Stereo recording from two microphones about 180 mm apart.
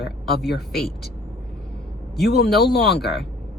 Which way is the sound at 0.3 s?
65° left (ahead or behind).